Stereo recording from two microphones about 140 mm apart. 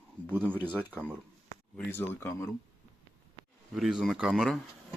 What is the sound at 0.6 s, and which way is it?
Speech, 15° right (ahead or behind).